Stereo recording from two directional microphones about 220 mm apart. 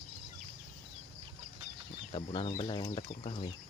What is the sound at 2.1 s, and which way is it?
Speech, 20° left (ahead or behind).